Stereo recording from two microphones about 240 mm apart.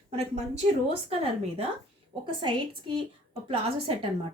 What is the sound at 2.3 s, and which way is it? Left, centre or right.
A woman's voice, centre.